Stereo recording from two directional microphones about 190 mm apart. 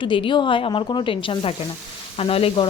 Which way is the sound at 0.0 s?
25° left (ahead or behind).